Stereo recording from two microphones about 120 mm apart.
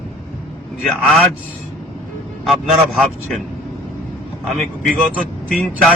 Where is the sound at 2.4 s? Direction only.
Centre (ahead or behind).